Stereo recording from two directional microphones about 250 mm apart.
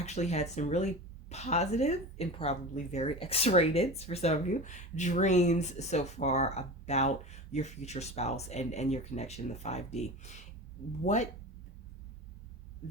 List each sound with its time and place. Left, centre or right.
0.0 s speech: left